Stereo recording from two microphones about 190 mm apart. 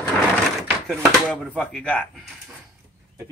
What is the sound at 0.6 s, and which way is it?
Speech, centre (ahead or behind).